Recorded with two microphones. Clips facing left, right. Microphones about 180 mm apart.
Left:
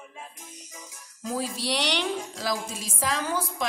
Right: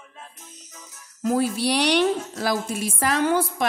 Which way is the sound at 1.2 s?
60° right (ahead or behind).